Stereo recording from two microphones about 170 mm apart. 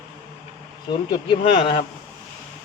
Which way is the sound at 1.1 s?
30° left (ahead or behind).